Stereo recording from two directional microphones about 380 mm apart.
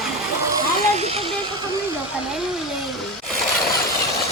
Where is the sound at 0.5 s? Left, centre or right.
Centre.